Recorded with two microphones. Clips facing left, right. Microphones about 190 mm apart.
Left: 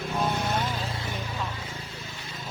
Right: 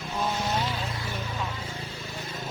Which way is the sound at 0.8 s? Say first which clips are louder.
Even; 30° left (ahead or behind).